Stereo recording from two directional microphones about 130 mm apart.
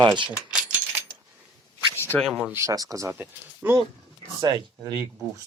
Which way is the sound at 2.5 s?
25° right (ahead or behind).